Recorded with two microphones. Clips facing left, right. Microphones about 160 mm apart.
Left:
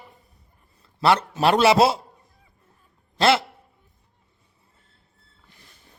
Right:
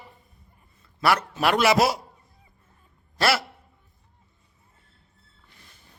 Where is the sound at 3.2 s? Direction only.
25° left (ahead or behind).